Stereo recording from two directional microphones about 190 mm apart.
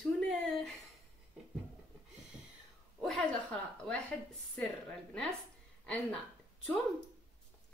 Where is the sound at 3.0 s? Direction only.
5° left (ahead or behind).